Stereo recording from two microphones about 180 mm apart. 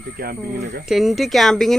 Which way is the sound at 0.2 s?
60° right (ahead or behind).